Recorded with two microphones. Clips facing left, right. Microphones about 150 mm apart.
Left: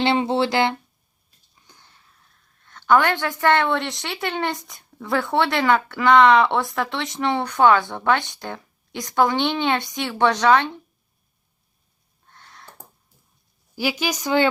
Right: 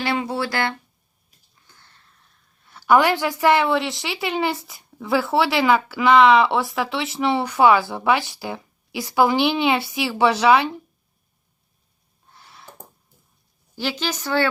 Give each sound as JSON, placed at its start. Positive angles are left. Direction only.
{"t": 0.0, "sound": "a woman's voice", "side_deg": 25}
{"t": 12.3, "sound": "a sound", "side_deg": -5}
{"t": 13.7, "sound": "speech", "side_deg": 10}